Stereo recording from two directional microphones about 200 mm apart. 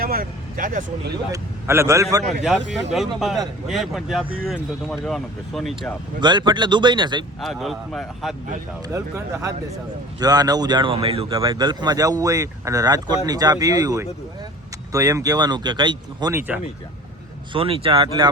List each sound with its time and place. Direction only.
0.0 s speech: 45° right (ahead or behind)
1.3 s a man's voice: 15° right (ahead or behind)
2.2 s speech: centre (ahead or behind)
6.1 s speech: 20° right (ahead or behind)
7.4 s speech: centre (ahead or behind)
8.9 s a man's voice: 15° right (ahead or behind)
17.5 s speech: 25° right (ahead or behind)